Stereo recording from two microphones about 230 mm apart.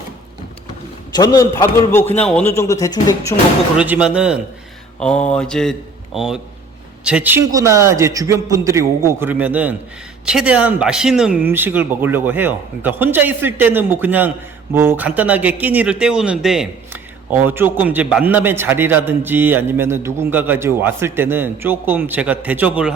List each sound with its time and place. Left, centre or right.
1.1 s a man's voice: centre
3.8 s mantra: centre
7.0 s speech: centre